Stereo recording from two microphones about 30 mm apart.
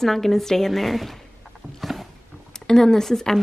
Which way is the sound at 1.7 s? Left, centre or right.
Centre.